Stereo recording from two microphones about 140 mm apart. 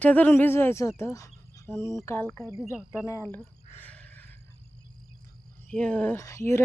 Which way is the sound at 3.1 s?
15° left (ahead or behind).